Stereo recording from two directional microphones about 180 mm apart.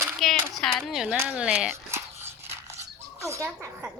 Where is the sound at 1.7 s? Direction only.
15° right (ahead or behind).